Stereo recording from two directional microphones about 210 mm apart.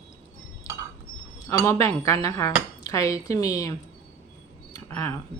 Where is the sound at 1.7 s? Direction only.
15° left (ahead or behind).